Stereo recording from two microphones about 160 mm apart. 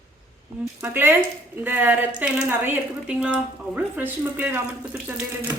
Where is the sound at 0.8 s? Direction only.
15° right (ahead or behind).